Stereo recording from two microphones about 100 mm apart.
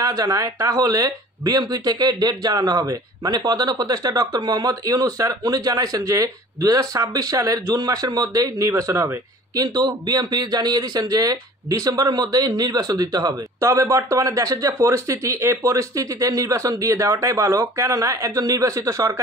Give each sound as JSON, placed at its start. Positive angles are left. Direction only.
{"t": 0.0, "sound": "speech", "side_deg": -40}
{"t": 9.8, "sound": "speech", "side_deg": -45}